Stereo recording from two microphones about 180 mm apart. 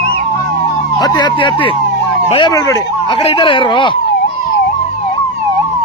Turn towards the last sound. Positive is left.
turn(degrees=25)  # may be behind; listen again after turning